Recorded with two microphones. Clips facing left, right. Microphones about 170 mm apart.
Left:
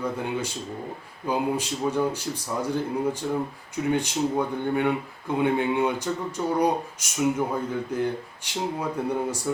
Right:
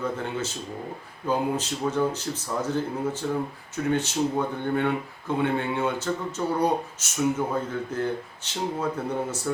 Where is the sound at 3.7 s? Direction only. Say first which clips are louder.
Left 1 dB; 10° left (ahead or behind).